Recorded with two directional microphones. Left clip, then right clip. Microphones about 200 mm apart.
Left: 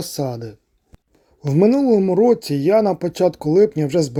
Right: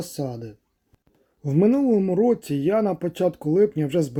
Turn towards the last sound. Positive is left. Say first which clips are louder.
# left 4 dB
turn(degrees=15)  # may be behind; listen again after turning